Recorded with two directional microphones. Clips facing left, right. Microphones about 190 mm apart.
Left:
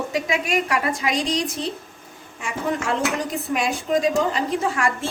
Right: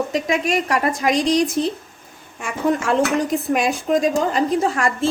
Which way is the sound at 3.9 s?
55° right (ahead or behind).